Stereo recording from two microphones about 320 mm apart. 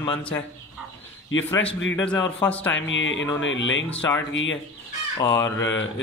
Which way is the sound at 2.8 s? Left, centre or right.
Left.